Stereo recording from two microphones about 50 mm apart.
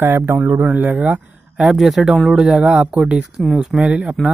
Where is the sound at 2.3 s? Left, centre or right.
Right.